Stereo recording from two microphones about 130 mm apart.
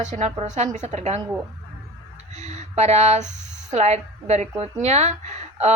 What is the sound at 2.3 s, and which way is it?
A woman's voice, 60° right (ahead or behind).